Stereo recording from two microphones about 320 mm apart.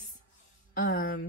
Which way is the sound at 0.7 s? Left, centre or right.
Left.